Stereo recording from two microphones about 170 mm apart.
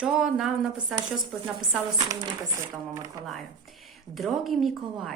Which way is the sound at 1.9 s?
20° right (ahead or behind).